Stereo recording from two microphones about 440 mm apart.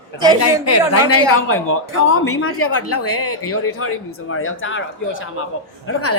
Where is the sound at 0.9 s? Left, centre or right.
Left.